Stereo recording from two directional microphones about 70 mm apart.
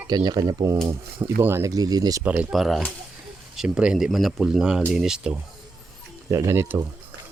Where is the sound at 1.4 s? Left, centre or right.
Right.